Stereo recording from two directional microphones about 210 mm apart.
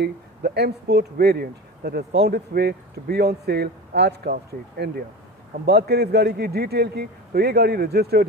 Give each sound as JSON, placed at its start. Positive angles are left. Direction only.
{"t": 0.0, "sound": "speech", "side_deg": -50}